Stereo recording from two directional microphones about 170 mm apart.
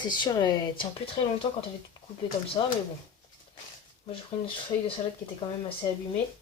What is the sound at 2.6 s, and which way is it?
Speech, 25° left (ahead or behind).